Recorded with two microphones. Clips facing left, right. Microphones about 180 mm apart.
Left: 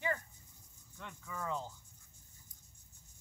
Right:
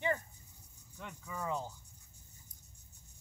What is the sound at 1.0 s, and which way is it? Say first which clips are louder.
Speech: right 2 dB; 15° right (ahead or behind).